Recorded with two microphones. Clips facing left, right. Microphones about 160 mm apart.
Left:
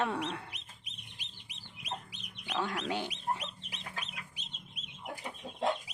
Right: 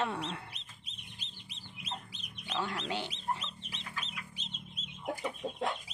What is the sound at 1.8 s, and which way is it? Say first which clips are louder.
Chicken: left 2 dB; 15° left (ahead or behind).